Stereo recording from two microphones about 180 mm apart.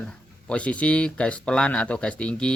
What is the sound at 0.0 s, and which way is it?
Speech, 5° left (ahead or behind).